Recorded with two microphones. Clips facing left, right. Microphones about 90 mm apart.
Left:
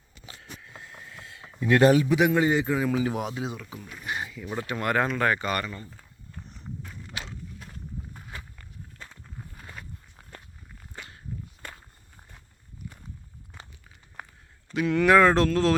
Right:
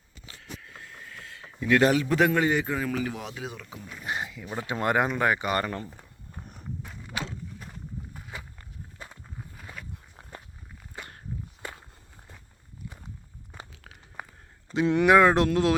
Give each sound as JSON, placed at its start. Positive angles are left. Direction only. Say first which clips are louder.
{"t": 0.3, "sound": "a sound", "louder": "right 1 dB", "side_deg": 25}
{"t": 2.0, "sound": "a man's voice", "louder": "left 1 dB", "side_deg": 10}
{"t": 3.5, "sound": "speech", "louder": "left 2 dB", "side_deg": 5}
{"t": 4.2, "sound": "a sound", "louder": "left 1 dB", "side_deg": -5}
{"t": 4.6, "sound": "speech", "louder": "right 1 dB", "side_deg": -20}
{"t": 5.6, "sound": "speech", "louder": "right 5 dB", "side_deg": -65}
{"t": 5.9, "sound": "walk", "louder": "right 1 dB", "side_deg": -20}
{"t": 8.1, "sound": "walk", "louder": "right 1 dB", "side_deg": -5}
{"t": 9.4, "sound": "a sound", "louder": "even", "side_deg": -5}
{"t": 14.7, "sound": "speech", "louder": "even", "side_deg": -25}